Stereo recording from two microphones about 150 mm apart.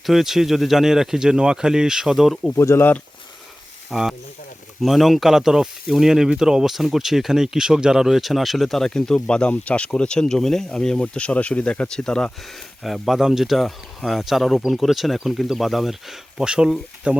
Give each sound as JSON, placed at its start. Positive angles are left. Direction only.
{"t": 0.0, "sound": "speech", "side_deg": 0}
{"t": 2.6, "sound": "speech", "side_deg": 15}
{"t": 3.8, "sound": "speech", "side_deg": -5}